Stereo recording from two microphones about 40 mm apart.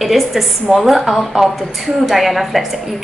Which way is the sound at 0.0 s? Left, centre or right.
Centre.